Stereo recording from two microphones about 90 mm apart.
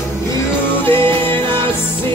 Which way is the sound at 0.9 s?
20° left (ahead or behind).